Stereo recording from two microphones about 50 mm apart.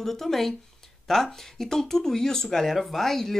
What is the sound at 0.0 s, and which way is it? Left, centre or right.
Speech, centre.